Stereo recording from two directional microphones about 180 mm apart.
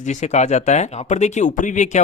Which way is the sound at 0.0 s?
40° left (ahead or behind).